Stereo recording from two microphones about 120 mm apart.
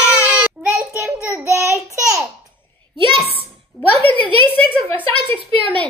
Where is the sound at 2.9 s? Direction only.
45° right (ahead or behind).